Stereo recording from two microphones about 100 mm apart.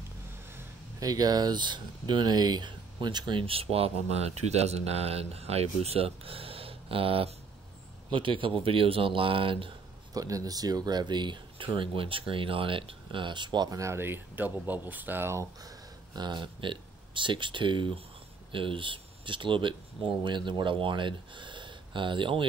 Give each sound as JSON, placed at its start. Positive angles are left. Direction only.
{"t": 0.9, "sound": "speech", "side_deg": -40}
{"t": 10.1, "sound": "speech", "side_deg": -35}
{"t": 13.7, "sound": "speech", "side_deg": -25}
{"t": 15.6, "sound": "speech", "side_deg": -40}